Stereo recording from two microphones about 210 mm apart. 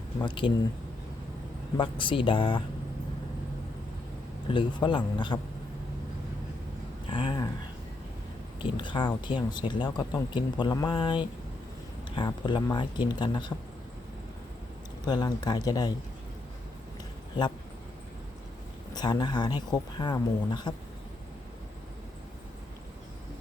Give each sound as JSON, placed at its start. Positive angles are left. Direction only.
{"t": 0.2, "sound": "speech", "side_deg": 25}
{"t": 1.7, "sound": "speech", "side_deg": 25}
{"t": 4.5, "sound": "speech", "side_deg": 25}
{"t": 7.1, "sound": "a sound", "side_deg": 25}
{"t": 8.6, "sound": "speech", "side_deg": 25}
{"t": 15.0, "sound": "speech", "side_deg": 20}
{"t": 18.9, "sound": "speech", "side_deg": 20}